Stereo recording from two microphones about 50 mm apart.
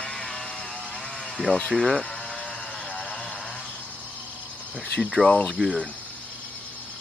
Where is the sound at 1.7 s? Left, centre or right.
Centre.